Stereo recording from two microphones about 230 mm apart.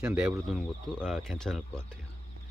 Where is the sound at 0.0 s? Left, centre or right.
Centre.